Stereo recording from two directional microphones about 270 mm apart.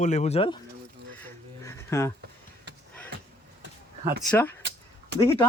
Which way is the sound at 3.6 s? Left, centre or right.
Right.